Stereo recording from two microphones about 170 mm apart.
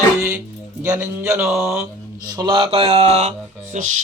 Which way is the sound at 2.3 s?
25° right (ahead or behind).